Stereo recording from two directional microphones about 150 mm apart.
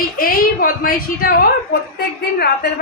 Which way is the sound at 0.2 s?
70° left (ahead or behind).